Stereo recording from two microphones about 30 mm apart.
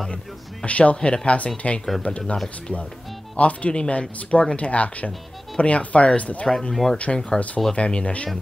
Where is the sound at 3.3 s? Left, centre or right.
Left.